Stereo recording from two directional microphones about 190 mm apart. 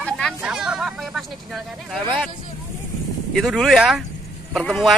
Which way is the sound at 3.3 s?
Centre (ahead or behind).